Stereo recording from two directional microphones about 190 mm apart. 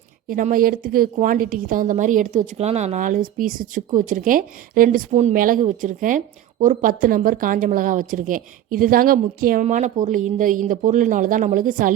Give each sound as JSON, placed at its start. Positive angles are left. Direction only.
{"t": 0.3, "sound": "a woman's voice", "side_deg": -45}